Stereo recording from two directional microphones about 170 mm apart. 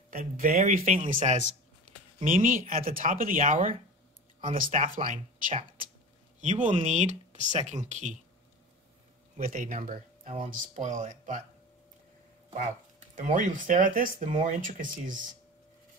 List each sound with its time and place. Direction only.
0.1 s speech: 55° right (ahead or behind)
9.4 s speech: 55° right (ahead or behind)
13.1 s speech: 50° right (ahead or behind)